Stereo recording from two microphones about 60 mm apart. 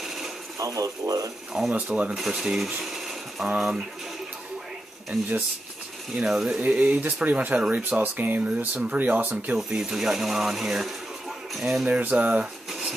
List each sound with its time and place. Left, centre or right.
0.0 s sewing machine: centre
0.6 s speech: right
1.7 s speech: right
2.0 s speech: centre
2.8 s mechanisms: centre
3.5 s speech: centre
6.1 s speech: centre
6.6 s speech: right
9.6 s speech: centre
11.9 s speech: right